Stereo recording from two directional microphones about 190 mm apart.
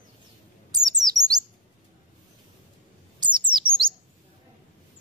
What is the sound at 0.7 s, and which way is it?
Chirp, 20° right (ahead or behind).